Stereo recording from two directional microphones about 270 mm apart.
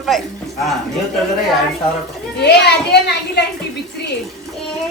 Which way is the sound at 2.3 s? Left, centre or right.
Left.